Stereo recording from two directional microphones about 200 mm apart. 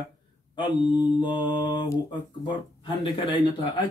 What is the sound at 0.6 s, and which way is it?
Speech, 25° left (ahead or behind).